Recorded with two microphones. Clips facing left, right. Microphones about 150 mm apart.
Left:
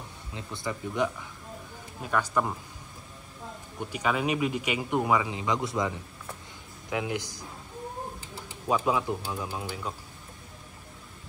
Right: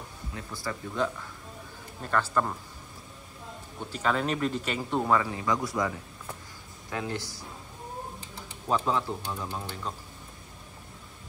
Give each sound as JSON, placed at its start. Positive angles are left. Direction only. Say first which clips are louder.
{"t": 0.3, "sound": "speech", "louder": "left 2 dB", "side_deg": 25}
{"t": 3.8, "sound": "speech", "louder": "even", "side_deg": 10}
{"t": 8.5, "sound": "speech", "louder": "left 1 dB", "side_deg": 10}